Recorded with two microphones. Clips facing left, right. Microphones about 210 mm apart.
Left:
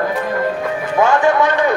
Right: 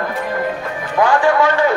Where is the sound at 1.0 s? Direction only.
20° left (ahead or behind).